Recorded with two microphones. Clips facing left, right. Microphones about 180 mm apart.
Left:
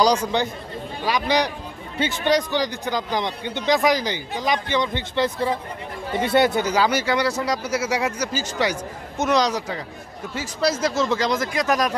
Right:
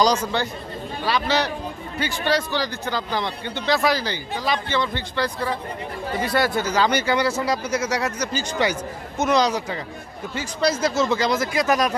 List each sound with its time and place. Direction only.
0.0 s speech: 15° left (ahead or behind)
6.9 s speech: centre (ahead or behind)